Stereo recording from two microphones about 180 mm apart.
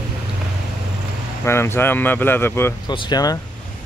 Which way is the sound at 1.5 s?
15° left (ahead or behind).